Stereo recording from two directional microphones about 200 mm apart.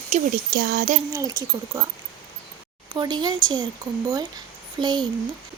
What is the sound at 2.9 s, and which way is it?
Speech, 20° right (ahead or behind).